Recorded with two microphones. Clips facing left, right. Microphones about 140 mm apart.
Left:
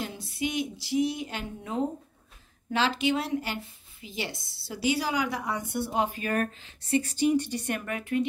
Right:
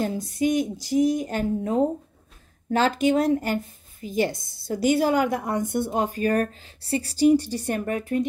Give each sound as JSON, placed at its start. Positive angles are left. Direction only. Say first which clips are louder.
{"t": 0.0, "sound": "a woman's voice", "louder": "right 8 dB", "side_deg": -45}